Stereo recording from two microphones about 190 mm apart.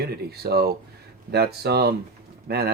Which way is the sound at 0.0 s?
55° right (ahead or behind).